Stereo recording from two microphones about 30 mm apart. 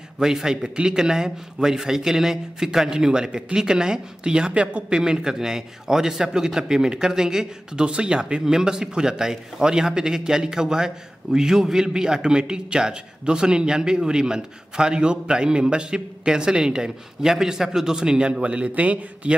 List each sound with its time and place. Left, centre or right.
0.2 s a man's voice: centre
2.9 s a man's voice: right
4.5 s a man's voice: right
8.5 s a man's voice: centre
18.4 s a man's voice: right